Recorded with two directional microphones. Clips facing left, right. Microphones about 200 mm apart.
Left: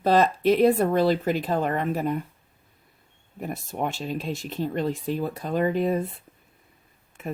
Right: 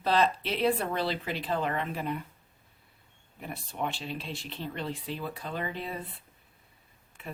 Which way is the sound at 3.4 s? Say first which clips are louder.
Left 6 dB; 45° left (ahead or behind).